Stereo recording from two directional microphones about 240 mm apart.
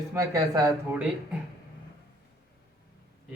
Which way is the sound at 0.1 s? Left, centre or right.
Centre.